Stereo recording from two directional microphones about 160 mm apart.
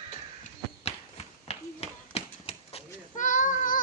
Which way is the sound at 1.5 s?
40° left (ahead or behind).